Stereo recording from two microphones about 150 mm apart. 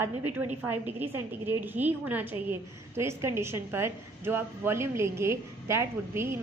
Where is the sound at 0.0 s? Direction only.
15° right (ahead or behind).